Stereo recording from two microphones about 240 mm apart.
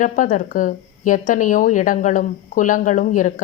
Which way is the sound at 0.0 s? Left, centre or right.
Left.